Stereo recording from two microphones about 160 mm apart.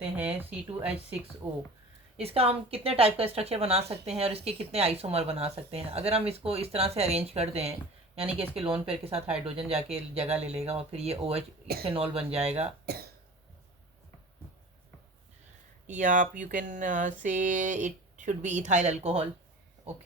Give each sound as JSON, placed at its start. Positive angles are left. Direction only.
{"t": 0.0, "sound": "speech", "side_deg": -10}
{"t": 2.1, "sound": "speech", "side_deg": -40}
{"t": 12.8, "sound": "speech", "side_deg": -75}
{"t": 15.9, "sound": "speech", "side_deg": -55}